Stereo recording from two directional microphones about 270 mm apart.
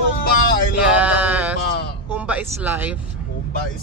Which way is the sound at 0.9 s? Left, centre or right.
Centre.